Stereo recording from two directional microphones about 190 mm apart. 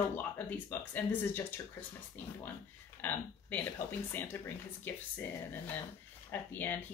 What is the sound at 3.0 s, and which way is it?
Speech, 10° left (ahead or behind).